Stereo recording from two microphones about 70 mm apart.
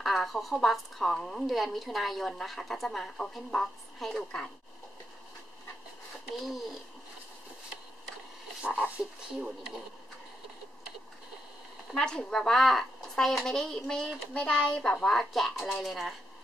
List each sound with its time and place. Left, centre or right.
0.0 s a woman's voice: centre
4.2 s speech: centre
6.4 s a woman's voice: centre
8.8 s speech: centre
11.9 s a woman's voice: centre